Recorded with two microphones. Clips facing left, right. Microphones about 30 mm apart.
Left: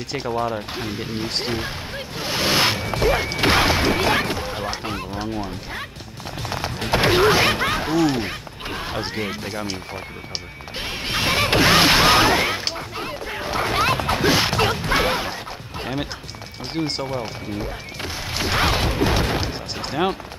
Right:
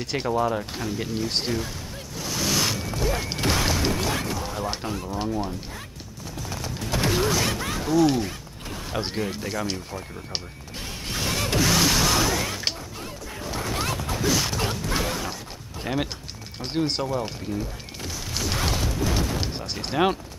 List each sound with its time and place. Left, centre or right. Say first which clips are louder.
0.1 s speech: even; centre
0.7 s speech: left 1 dB; left
2.1 s a sound: left 5 dB; left
3.3 s music: left 6 dB; left
4.8 s speech: left 2 dB; left
6.9 s a sound: left 7 dB; left
9.1 s speech: left 2 dB; left
10.8 s music: left 7 dB; left
12.7 s smash: left 7 dB; left
16.7 s speech: even; centre
17.0 s speech: even; left
17.6 s music: left 4 dB; left
19.4 s speech: left 3 dB; centre